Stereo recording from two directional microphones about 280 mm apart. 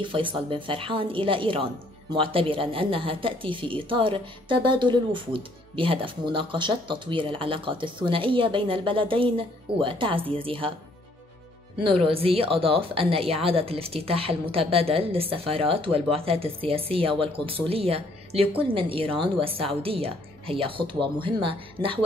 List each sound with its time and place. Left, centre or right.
0.1 s a woman's voice: centre
11.8 s a woman's voice: centre